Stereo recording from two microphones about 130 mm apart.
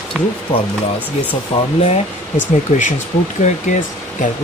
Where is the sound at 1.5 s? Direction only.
50° left (ahead or behind).